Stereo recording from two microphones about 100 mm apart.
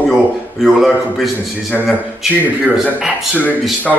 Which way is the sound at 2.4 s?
15° right (ahead or behind).